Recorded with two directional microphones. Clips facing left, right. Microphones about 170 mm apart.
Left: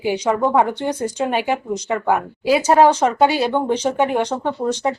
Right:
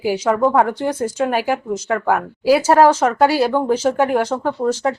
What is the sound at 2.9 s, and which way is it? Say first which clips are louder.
Speech: right 1 dB; 5° right (ahead or behind).